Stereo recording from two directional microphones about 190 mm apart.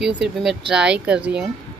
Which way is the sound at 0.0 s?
Centre (ahead or behind).